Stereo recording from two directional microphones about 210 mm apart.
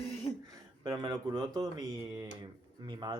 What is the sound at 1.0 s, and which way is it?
Speech, 20° right (ahead or behind).